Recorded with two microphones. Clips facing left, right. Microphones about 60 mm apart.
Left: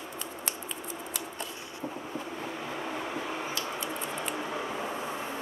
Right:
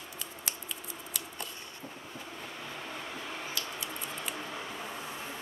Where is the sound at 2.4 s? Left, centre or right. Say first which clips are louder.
Left 6 dB; left.